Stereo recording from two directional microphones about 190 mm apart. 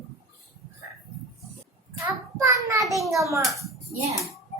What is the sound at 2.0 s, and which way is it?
Child singing, 15° right (ahead or behind).